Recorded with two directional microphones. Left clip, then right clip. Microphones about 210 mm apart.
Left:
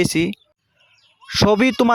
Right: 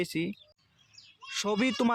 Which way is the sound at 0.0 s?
45° left (ahead or behind).